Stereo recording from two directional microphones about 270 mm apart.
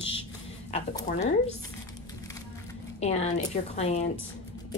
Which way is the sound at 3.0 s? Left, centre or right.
Left.